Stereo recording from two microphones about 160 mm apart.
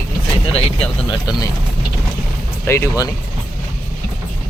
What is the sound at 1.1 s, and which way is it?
Speech, 25° left (ahead or behind).